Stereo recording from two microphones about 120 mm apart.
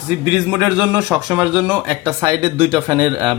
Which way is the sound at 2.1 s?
40° right (ahead or behind).